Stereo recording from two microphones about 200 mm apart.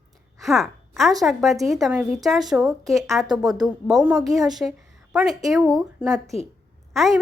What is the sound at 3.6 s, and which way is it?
A woman's voice, centre (ahead or behind).